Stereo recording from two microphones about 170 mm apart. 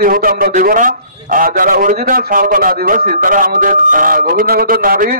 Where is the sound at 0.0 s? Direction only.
55° right (ahead or behind).